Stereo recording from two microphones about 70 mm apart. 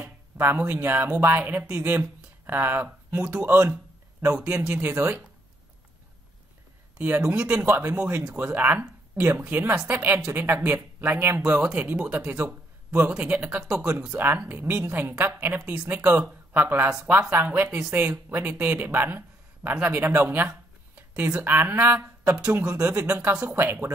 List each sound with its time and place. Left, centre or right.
0.4 s a woman's voice: right
3.2 s speech: centre
3.4 s a woman's voice: right
4.4 s speech: centre
4.8 s speech: right
7.0 s speech: right
7.7 s a woman's voice: right
8.0 s speech: centre
8.5 s a woman's voice: right
11.6 s a woman's voice: right
13.6 s a woman's voice: right; by 16.0 s centre
16.0 s a woman's voice: right
17.6 s speech: centre
18.1 s a woman's voice: right